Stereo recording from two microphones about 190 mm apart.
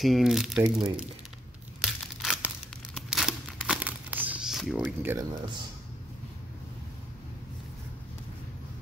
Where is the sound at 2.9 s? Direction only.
Centre (ahead or behind).